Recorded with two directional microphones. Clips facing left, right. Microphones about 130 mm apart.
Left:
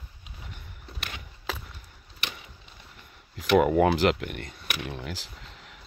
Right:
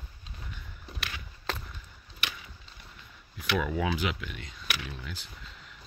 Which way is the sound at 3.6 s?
60° left (ahead or behind).